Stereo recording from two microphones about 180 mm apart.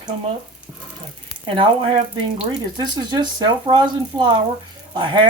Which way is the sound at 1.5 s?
30° right (ahead or behind).